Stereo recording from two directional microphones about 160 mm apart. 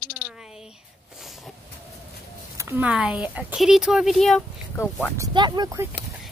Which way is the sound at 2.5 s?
15° right (ahead or behind).